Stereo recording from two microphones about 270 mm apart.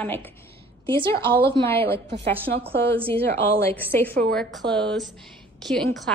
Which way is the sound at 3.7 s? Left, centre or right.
Centre.